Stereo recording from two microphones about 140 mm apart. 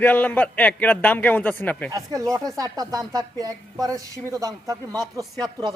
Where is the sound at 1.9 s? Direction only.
25° right (ahead or behind).